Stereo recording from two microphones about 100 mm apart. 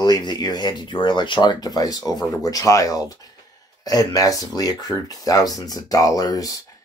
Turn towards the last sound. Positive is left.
turn(degrees=40)  # may be behind; listen again after turning